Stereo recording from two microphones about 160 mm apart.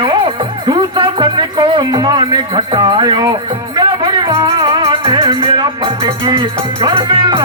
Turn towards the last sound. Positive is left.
turn(degrees=-30)  # may be behind; listen again after turning